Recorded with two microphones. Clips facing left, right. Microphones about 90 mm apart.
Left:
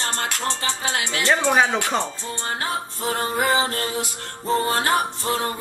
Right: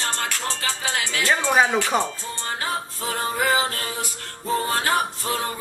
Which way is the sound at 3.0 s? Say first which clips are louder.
Left 3 dB; 25° left (ahead or behind).